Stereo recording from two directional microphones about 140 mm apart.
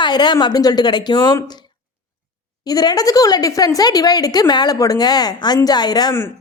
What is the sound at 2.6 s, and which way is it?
Speech, 30° left (ahead or behind).